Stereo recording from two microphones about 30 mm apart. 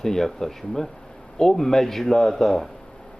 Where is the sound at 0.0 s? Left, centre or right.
Centre.